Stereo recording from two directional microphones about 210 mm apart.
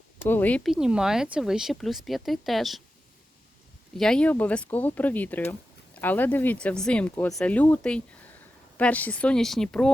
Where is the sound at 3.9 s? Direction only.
5° left (ahead or behind).